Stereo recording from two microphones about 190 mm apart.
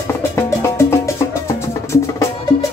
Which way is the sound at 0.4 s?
15° left (ahead or behind).